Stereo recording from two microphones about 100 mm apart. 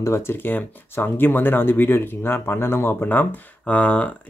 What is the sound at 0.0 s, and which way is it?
Speech, 25° left (ahead or behind).